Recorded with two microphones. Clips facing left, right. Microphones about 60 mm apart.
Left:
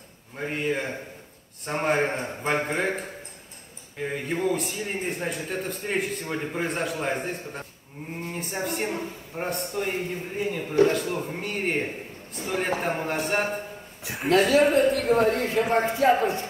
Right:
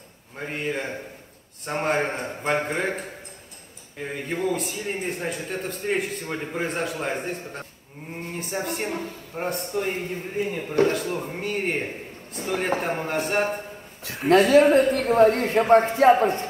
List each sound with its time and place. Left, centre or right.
0.4 s a man's voice: centre
4.1 s a man's voice: centre
14.0 s speech: centre
14.5 s speech: right